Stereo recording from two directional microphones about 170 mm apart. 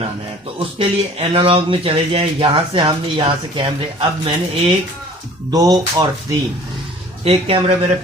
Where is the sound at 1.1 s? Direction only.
30° right (ahead or behind).